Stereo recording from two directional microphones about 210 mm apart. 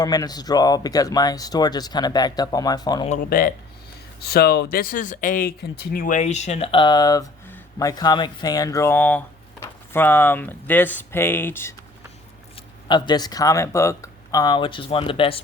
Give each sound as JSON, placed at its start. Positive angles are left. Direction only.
{"t": 0.0, "sound": "speech", "side_deg": 20}
{"t": 3.1, "sound": "speech", "side_deg": 40}
{"t": 12.9, "sound": "speech", "side_deg": 20}